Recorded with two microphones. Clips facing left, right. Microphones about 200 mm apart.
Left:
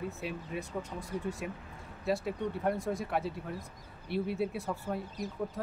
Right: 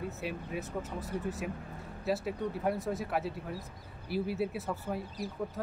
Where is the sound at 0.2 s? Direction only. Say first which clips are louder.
Right 1 dB; centre (ahead or behind).